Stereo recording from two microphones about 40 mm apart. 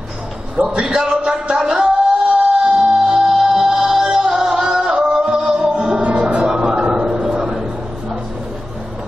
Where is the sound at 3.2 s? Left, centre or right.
Centre.